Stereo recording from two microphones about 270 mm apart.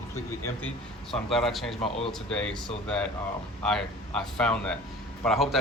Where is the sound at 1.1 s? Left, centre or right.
Centre.